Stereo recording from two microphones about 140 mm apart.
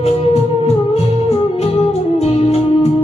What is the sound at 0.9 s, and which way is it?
Music, 50° left (ahead or behind).